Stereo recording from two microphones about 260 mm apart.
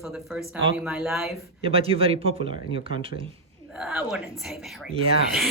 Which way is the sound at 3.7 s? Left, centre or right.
Centre.